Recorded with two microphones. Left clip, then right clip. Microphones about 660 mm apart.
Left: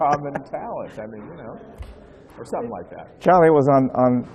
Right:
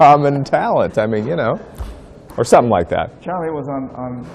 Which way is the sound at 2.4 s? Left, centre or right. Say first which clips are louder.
Right 17 dB; right.